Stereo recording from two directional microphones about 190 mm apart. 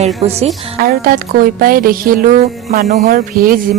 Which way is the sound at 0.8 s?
50° right (ahead or behind).